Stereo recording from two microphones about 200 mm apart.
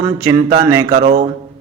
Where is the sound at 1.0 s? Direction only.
45° right (ahead or behind).